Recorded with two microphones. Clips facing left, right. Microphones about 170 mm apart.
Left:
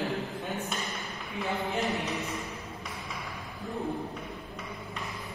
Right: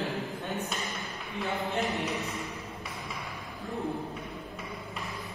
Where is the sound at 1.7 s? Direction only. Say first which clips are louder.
Even; centre (ahead or behind).